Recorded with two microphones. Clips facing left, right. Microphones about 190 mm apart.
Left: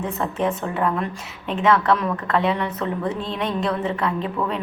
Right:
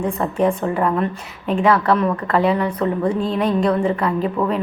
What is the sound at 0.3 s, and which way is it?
A woman's voice, 5° left (ahead or behind).